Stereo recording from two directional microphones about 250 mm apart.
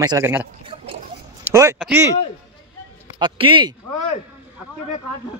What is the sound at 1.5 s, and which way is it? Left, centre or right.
Speech, centre.